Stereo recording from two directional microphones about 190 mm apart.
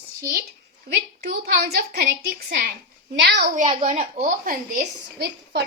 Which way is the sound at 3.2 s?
60° right (ahead or behind).